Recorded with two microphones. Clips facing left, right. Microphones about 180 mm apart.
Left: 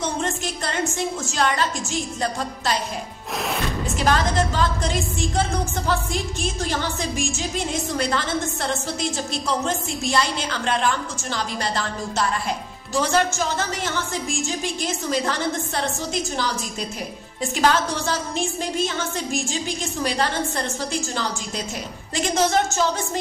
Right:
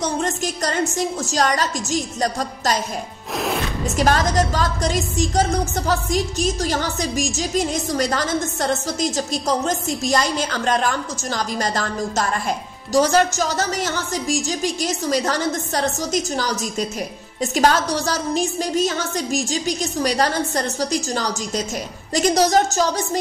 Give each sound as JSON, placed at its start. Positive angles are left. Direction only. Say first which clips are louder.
{"t": 0.0, "sound": "a woman's voice", "louder": "right 3 dB", "side_deg": -40}
{"t": 3.3, "sound": "music", "louder": "right 3 dB", "side_deg": 0}
{"t": 3.9, "sound": "a woman's voice", "louder": "right 3 dB", "side_deg": -40}